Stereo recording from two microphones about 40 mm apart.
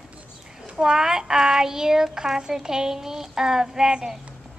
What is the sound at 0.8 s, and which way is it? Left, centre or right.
A woman's voice, centre.